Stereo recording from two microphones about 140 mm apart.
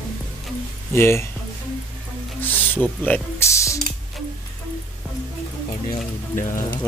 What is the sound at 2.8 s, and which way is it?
Speech, 10° left (ahead or behind).